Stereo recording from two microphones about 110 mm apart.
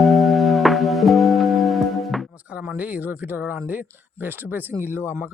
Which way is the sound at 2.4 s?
15° right (ahead or behind).